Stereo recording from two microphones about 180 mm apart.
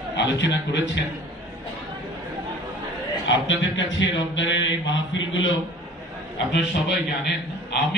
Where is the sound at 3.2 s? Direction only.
90° left.